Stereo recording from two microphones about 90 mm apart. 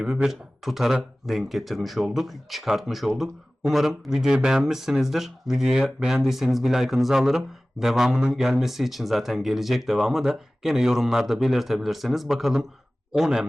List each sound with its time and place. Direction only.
0.0 s speech: 5° right (ahead or behind)